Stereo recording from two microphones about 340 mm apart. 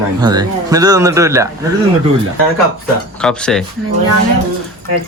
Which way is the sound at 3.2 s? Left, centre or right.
Centre.